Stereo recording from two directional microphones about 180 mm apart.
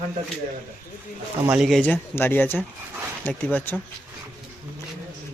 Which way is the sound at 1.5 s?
Centre (ahead or behind).